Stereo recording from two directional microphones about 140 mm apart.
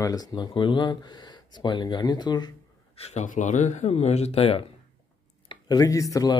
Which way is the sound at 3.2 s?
65° left (ahead or behind).